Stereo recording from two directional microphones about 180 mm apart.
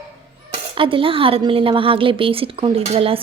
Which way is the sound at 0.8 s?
30° right (ahead or behind).